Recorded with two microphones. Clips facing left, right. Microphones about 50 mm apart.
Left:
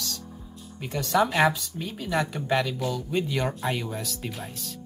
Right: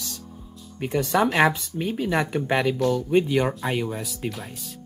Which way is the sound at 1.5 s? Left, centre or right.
Right.